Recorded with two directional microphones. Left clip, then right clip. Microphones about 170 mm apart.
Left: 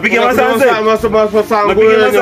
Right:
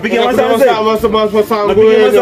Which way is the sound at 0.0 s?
25° left (ahead or behind).